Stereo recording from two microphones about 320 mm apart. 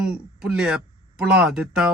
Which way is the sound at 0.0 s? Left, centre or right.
Centre.